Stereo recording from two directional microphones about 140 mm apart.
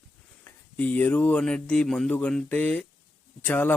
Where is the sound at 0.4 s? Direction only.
10° left (ahead or behind).